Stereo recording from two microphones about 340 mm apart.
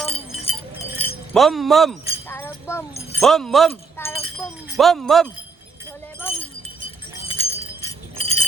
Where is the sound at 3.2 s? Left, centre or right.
Centre.